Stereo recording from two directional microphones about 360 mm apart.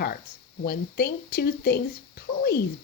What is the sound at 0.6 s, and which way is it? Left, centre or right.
Speech, left.